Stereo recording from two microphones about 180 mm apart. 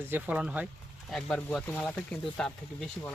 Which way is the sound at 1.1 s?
5° left (ahead or behind).